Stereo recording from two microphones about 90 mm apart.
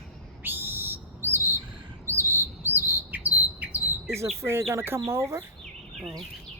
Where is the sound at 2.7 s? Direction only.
20° right (ahead or behind).